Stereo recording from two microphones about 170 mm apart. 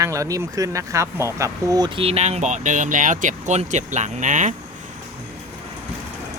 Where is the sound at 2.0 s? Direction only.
35° right (ahead or behind).